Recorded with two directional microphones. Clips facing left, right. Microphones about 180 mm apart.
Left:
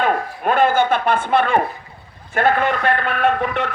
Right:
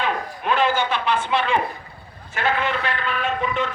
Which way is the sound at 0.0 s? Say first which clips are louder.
Left 6 dB; 50° left (ahead or behind).